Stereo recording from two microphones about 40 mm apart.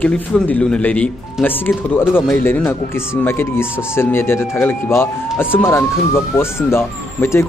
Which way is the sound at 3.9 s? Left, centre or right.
Left.